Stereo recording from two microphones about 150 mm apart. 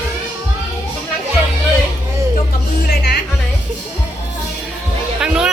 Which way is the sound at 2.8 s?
90° left.